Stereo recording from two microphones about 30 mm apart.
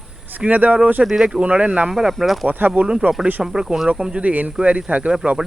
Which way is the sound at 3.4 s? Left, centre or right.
Centre.